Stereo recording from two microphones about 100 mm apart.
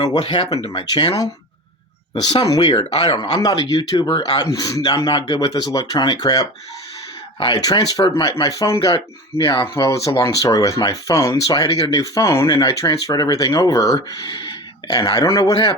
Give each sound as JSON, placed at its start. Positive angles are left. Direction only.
{"t": 0.0, "sound": "speech", "side_deg": 55}
{"t": 2.3, "sound": "speech", "side_deg": 45}
{"t": 2.7, "sound": "speech", "side_deg": 70}
{"t": 3.3, "sound": "a man's voice", "side_deg": 45}
{"t": 9.7, "sound": "a man's voice", "side_deg": 30}